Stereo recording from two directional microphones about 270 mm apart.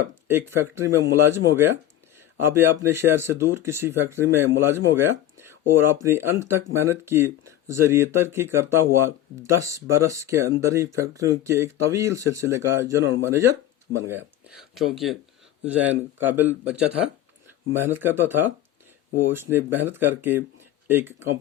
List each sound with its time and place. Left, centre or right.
0.3 s speech: centre
14.8 s speech: centre